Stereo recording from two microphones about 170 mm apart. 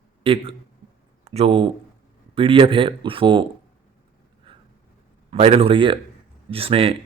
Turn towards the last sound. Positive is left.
turn(degrees=-35)  # may be behind; listen again after turning